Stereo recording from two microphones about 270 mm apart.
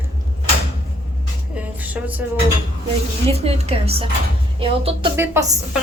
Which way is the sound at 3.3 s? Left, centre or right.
Right.